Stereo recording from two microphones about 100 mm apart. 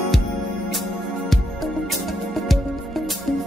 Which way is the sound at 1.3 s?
Centre (ahead or behind).